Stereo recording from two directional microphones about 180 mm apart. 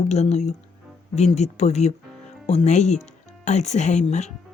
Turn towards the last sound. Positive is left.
turn(degrees=40)  # may be behind; listen again after turning